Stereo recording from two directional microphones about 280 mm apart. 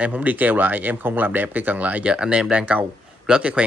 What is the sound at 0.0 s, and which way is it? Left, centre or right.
Speech, centre.